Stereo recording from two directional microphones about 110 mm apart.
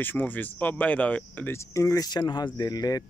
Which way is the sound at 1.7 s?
30° left (ahead or behind).